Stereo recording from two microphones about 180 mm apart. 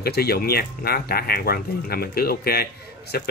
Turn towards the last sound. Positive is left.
turn(degrees=60)  # may be behind; listen again after turning